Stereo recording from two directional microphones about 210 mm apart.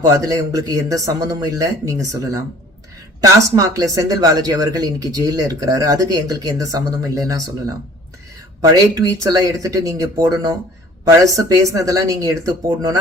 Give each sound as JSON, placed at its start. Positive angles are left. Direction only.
{"t": 0.0, "sound": "speech", "side_deg": -15}
{"t": 8.7, "sound": "speech", "side_deg": -20}